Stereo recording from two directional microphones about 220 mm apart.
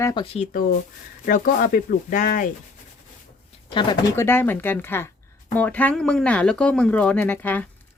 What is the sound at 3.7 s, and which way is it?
Speech, 20° left (ahead or behind).